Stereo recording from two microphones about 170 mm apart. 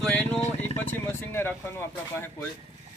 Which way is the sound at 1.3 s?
10° left (ahead or behind).